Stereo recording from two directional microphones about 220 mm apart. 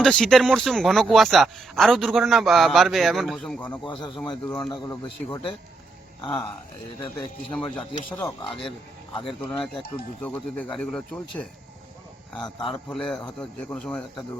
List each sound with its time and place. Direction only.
0.0 s a man's voice: 5° left (ahead or behind)
4.7 s a man's voice: 20° left (ahead or behind)
7.5 s a man's voice: 5° left (ahead or behind)
8.4 s a man's voice: 25° left (ahead or behind)
9.5 s a man's voice: centre (ahead or behind)
12.5 s a man's voice: centre (ahead or behind)